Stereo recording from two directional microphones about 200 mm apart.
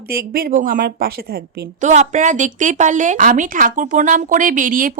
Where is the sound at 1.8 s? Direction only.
35° right (ahead or behind).